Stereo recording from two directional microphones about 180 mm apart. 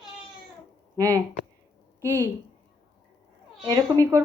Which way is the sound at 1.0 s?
20° right (ahead or behind).